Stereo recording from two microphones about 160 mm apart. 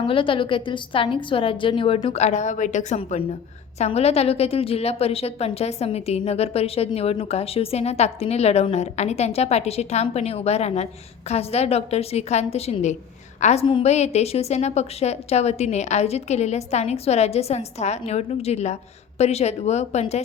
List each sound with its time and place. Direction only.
0.0 s a woman's voice: 35° left (ahead or behind)